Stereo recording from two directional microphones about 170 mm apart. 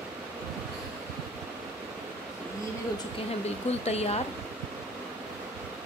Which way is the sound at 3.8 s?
40° left (ahead or behind).